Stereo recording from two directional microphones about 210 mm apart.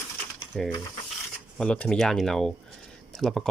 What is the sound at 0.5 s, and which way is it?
Speech, 5° left (ahead or behind).